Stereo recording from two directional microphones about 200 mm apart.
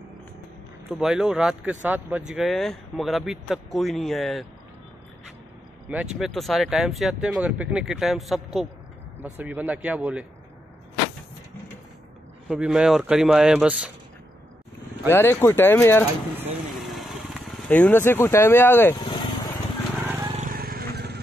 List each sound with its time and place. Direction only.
0.8 s speech: 5° right (ahead or behind)
5.9 s speech: centre (ahead or behind)
12.4 s speech: 5° right (ahead or behind)
15.0 s speech: 10° left (ahead or behind)
16.7 s vehicle: centre (ahead or behind)
18.9 s vehicle: 20° left (ahead or behind)
20.3 s vehicle: 45° right (ahead or behind)